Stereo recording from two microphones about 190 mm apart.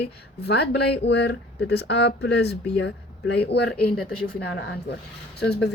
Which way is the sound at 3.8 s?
5° left (ahead or behind).